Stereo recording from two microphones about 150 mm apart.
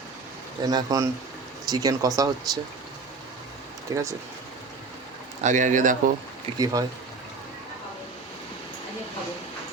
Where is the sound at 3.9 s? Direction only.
20° right (ahead or behind).